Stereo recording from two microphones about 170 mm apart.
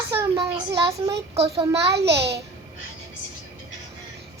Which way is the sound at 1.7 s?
15° right (ahead or behind).